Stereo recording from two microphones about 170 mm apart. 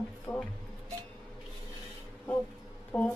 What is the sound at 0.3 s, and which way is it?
Speech, 20° left (ahead or behind).